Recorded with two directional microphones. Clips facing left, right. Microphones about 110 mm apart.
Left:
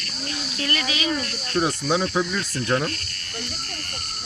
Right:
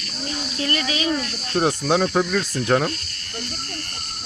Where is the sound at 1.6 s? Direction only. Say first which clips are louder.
Right 3 dB; 60° right (ahead or behind).